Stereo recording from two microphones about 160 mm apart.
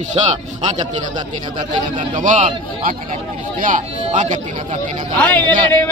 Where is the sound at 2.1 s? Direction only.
55° right (ahead or behind).